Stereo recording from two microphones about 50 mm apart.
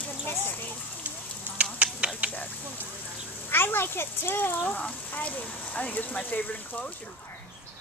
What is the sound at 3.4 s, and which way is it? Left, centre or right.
A child's voice, left.